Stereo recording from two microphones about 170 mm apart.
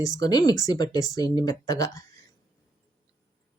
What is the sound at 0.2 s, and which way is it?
Speech, 20° left (ahead or behind).